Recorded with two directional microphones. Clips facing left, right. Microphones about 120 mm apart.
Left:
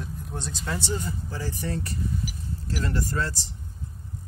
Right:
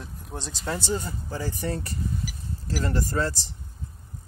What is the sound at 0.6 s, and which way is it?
Speech, 35° right (ahead or behind).